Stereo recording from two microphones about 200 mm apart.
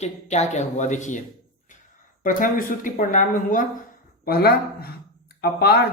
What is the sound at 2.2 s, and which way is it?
Speech, 40° left (ahead or behind).